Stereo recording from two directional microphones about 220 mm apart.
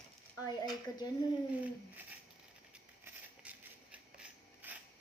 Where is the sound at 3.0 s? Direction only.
5° right (ahead or behind).